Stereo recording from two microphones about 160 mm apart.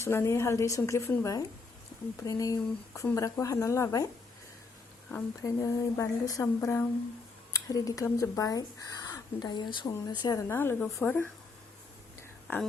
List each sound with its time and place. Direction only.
0.0 s a woman's voice: 15° left (ahead or behind)
5.1 s speech: 20° left (ahead or behind)